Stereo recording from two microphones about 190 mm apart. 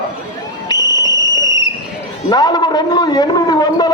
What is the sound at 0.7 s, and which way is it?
Basketball bounce, 20° left (ahead or behind).